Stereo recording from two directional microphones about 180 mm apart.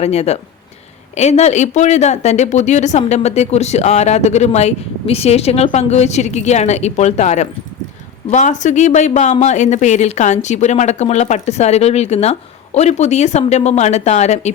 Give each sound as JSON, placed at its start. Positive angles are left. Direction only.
{"t": 0.0, "sound": "speech", "side_deg": 35}